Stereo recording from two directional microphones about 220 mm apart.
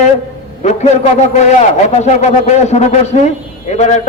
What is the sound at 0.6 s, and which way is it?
A man's voice, 30° left (ahead or behind).